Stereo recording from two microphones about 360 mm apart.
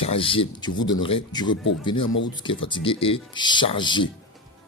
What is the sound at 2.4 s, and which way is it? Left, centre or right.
Speech, centre.